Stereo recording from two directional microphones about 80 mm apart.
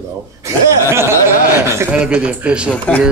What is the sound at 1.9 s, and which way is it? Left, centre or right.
Speech, centre.